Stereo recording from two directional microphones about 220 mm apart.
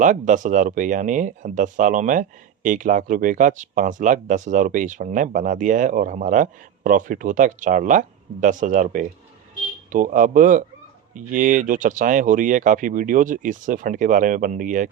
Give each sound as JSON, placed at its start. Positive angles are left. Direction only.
{"t": 0.0, "sound": "speech", "side_deg": -35}